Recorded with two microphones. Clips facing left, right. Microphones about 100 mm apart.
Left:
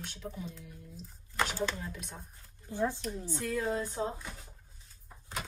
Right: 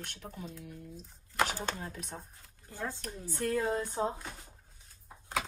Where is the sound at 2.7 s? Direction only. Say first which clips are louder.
Left 7 dB; 20° left (ahead or behind).